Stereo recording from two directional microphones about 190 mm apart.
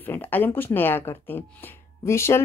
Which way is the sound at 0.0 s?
10° left (ahead or behind).